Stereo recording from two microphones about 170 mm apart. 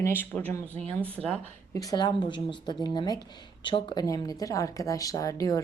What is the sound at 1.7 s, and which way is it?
Speech, 20° left (ahead or behind).